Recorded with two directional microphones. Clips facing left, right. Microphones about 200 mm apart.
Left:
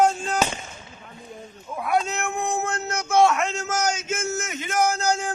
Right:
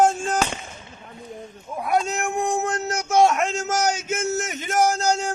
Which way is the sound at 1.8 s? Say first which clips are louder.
Right 1 dB; 40° right (ahead or behind).